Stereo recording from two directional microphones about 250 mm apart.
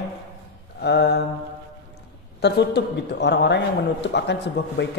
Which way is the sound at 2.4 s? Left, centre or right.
Left.